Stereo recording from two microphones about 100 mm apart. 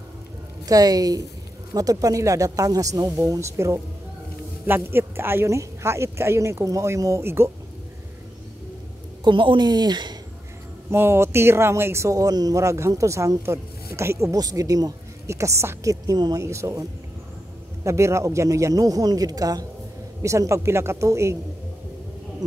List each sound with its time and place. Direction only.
0.7 s speech: 40° right (ahead or behind)
9.2 s speech: 55° right (ahead or behind)
10.9 s speech: 25° right (ahead or behind)
17.8 s speech: 30° right (ahead or behind)